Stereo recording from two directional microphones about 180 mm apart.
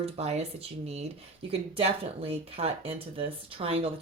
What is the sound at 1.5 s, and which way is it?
Speech, 30° right (ahead or behind).